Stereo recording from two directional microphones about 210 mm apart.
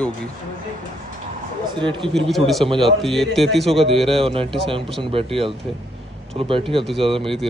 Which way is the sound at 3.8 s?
25° right (ahead or behind).